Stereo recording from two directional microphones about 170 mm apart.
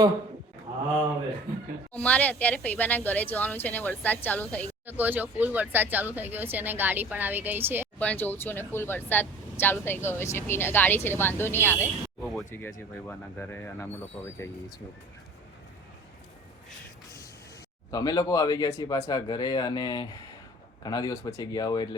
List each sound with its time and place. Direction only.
2.0 s speech: 10° left (ahead or behind)
4.9 s speech: 10° right (ahead or behind)
7.9 s speech: 10° left (ahead or behind)
17.9 s speech: 20° left (ahead or behind)